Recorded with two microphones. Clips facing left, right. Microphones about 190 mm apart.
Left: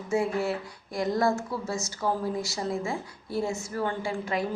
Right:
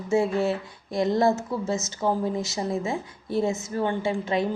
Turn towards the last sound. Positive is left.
turn(degrees=-25)  # may be behind; listen again after turning